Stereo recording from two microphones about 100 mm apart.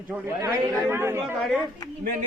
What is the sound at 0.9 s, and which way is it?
Speech, 25° right (ahead or behind).